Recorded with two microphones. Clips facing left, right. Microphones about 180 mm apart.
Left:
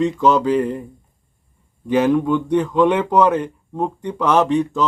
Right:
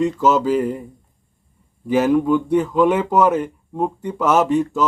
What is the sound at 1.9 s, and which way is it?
Speech, 5° right (ahead or behind).